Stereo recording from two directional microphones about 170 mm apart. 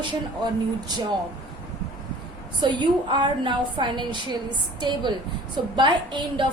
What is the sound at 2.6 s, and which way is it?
A woman's voice, 25° right (ahead or behind).